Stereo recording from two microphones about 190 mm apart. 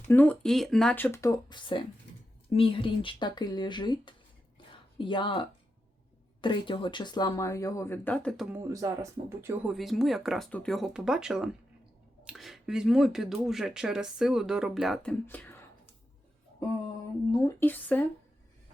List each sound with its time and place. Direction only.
0.1 s speech: 10° left (ahead or behind)
8.5 s speech: 15° right (ahead or behind)
9.7 s speech: centre (ahead or behind)
17.6 s speech: 10° left (ahead or behind)